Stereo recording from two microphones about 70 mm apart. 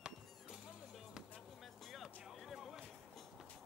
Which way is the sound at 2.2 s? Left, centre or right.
Centre.